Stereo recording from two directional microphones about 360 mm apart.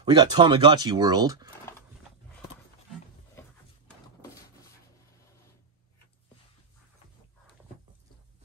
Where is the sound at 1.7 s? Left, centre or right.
Centre.